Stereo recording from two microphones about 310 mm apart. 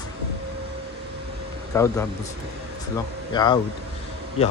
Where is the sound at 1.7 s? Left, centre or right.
Centre.